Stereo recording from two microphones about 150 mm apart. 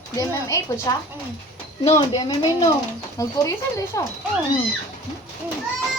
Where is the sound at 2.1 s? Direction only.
25° left (ahead or behind).